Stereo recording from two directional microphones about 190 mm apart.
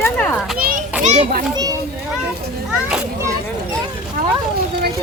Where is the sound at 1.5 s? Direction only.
20° right (ahead or behind).